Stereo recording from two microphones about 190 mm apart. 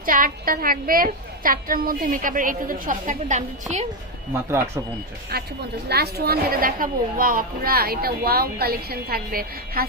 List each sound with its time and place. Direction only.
0.0 s a child's voice: 45° right (ahead or behind)
4.4 s speech: 15° right (ahead or behind)
5.3 s a child's voice: 55° right (ahead or behind)